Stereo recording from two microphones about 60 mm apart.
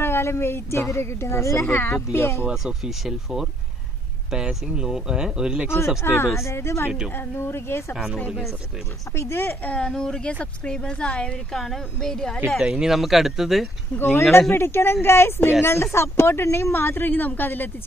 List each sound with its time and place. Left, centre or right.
0.0 s a woman's voice: left
1.7 s speech: left
2.1 s a woman's voice: left
2.5 s speech: centre
6.0 s a woman's voice: left
7.9 s speech: centre
9.1 s a woman's voice: left
9.6 s speech: centre
11.5 s speech: centre
12.4 s speech: centre
14.5 s a woman's voice: left